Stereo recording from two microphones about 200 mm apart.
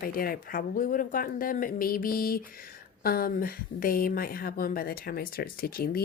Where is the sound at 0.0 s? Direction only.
45° left (ahead or behind).